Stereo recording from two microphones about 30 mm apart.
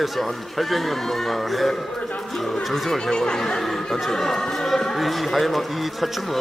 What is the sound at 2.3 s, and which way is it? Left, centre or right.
Speech, centre.